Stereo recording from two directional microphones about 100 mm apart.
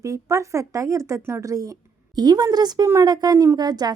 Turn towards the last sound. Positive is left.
turn(degrees=-40)  # may be behind; listen again after turning